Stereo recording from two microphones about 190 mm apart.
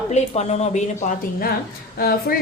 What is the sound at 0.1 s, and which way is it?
Speech, 35° left (ahead or behind).